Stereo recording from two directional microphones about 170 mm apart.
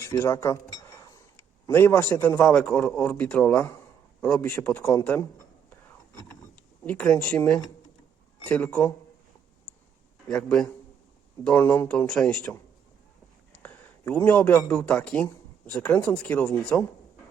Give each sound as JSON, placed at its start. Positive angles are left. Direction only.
{"t": 0.0, "sound": "cutlery", "side_deg": 15}
{"t": 1.6, "sound": "speech", "side_deg": 10}
{"t": 6.8, "sound": "speech", "side_deg": 5}
{"t": 10.2, "sound": "speech", "side_deg": 5}
{"t": 13.6, "sound": "a sound", "side_deg": 10}
{"t": 14.7, "sound": "speech", "side_deg": 5}